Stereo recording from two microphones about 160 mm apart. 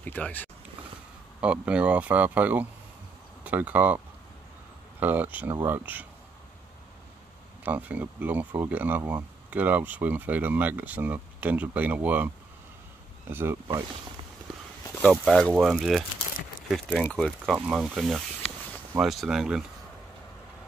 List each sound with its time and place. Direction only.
0.0 s speech: 10° left (ahead or behind)
1.4 s speech: 5° right (ahead or behind)
5.0 s speech: 10° right (ahead or behind)
7.6 s speech: 10° right (ahead or behind)
13.3 s speech: 15° right (ahead or behind)
15.0 s speech: 5° left (ahead or behind)